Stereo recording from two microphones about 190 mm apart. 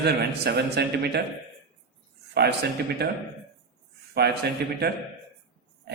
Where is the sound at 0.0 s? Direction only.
60° right (ahead or behind).